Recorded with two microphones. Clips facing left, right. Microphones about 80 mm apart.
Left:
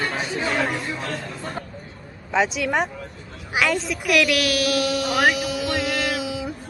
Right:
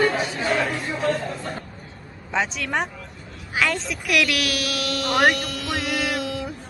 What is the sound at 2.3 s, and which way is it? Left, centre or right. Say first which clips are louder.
A woman's voice: left 3 dB; centre.